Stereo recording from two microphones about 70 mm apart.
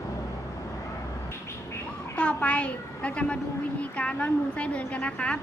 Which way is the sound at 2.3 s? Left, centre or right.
Centre.